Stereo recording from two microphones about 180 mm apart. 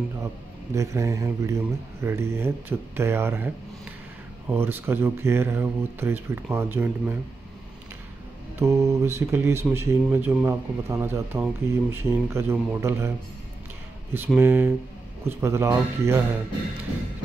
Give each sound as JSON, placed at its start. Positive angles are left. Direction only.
{"t": 0.7, "sound": "speech", "side_deg": -15}
{"t": 8.5, "sound": "speech", "side_deg": -15}
{"t": 14.1, "sound": "speech", "side_deg": -10}